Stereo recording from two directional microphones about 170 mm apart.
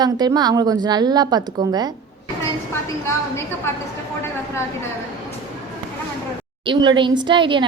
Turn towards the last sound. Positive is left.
turn(degrees=-30)  # may be behind; listen again after turning